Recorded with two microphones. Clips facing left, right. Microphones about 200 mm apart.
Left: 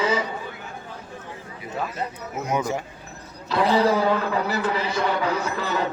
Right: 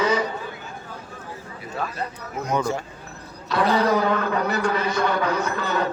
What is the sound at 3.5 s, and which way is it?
A man's voice, 25° left (ahead or behind).